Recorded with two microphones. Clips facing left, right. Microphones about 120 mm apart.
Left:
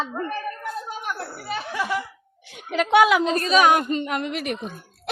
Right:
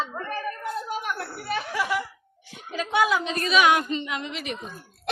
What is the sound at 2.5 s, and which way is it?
Speech, 75° left (ahead or behind).